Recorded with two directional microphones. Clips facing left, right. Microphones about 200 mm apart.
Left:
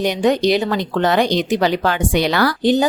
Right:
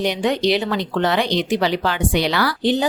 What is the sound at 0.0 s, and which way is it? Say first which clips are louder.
Speech: left 3 dB; 45° left (ahead or behind).